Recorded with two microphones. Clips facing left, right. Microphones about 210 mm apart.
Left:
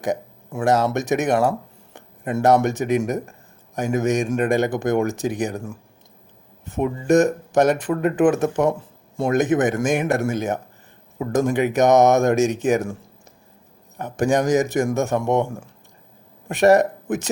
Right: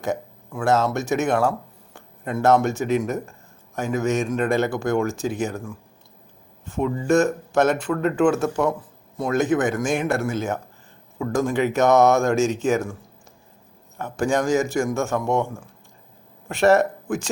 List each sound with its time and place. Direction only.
0.0 s speech: 15° left (ahead or behind)
6.7 s speech: 15° left (ahead or behind)
14.0 s speech: 20° left (ahead or behind)
16.5 s speech: 15° left (ahead or behind)